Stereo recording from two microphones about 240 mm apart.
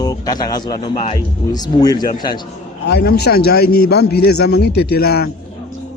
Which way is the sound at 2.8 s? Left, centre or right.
Left.